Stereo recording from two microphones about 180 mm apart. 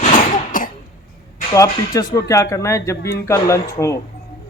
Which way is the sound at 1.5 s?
20° left (ahead or behind).